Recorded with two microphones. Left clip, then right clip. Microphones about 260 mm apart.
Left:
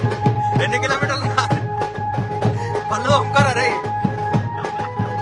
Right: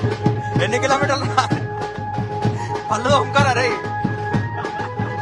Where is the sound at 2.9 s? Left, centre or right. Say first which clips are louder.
Right 1 dB; centre.